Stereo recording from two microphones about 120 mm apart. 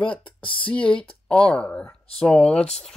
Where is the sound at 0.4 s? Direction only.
45° left (ahead or behind).